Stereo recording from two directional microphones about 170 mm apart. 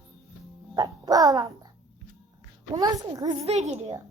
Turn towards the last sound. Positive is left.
turn(degrees=-40)  # may be behind; listen again after turning